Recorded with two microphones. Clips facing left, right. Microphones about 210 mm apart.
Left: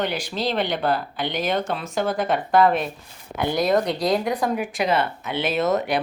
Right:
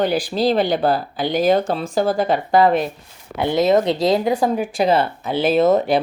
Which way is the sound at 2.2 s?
Centre (ahead or behind).